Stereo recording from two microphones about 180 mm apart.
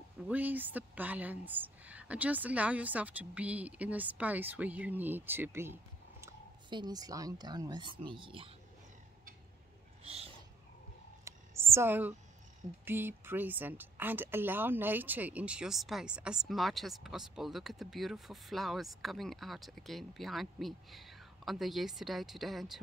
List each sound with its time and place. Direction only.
0.3 s speech: 10° right (ahead or behind)
6.7 s speech: 25° right (ahead or behind)
11.2 s a sound: 15° right (ahead or behind)
12.8 s a woman's voice: 10° right (ahead or behind)